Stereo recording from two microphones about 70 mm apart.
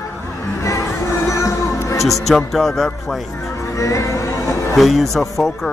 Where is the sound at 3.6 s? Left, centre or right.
Left.